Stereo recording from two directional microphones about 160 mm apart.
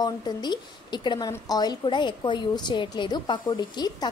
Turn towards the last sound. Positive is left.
turn(degrees=25)  # may be behind; listen again after turning